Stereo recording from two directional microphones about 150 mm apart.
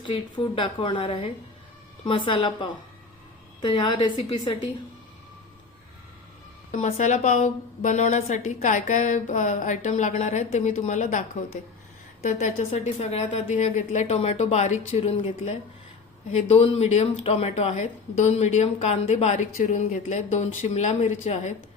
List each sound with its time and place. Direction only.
0.0 s a woman's voice: 35° left (ahead or behind)
6.7 s speech: 50° left (ahead or behind)
12.2 s speech: 60° left (ahead or behind)